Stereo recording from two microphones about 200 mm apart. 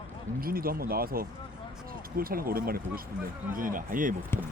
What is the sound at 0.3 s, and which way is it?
Speech, 45° right (ahead or behind).